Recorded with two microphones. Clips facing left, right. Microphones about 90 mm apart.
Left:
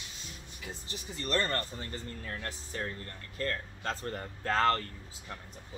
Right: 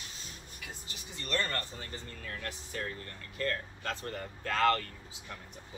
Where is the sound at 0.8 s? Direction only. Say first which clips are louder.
Left 5 dB; 35° left (ahead or behind).